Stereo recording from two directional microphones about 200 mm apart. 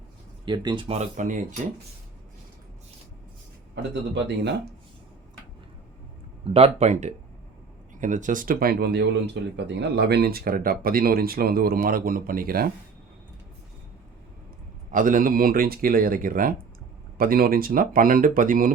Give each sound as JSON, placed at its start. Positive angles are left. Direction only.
{"t": 0.4, "sound": "speech", "side_deg": -20}
{"t": 6.4, "sound": "speech", "side_deg": -30}
{"t": 14.8, "sound": "speech", "side_deg": -40}